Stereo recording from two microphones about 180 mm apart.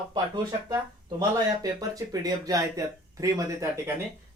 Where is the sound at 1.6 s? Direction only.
20° right (ahead or behind).